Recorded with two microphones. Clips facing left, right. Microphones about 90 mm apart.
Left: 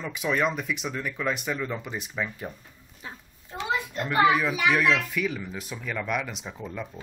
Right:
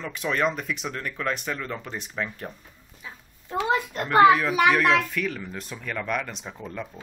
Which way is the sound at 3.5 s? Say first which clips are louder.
Right 5 dB; 50° right (ahead or behind).